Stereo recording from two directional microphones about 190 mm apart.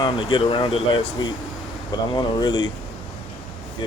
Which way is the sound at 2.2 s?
20° left (ahead or behind).